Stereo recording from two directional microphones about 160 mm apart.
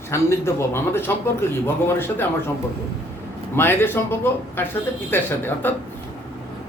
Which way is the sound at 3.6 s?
15° left (ahead or behind).